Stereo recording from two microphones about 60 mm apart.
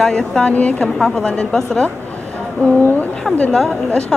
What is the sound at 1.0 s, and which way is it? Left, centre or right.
Speech, centre.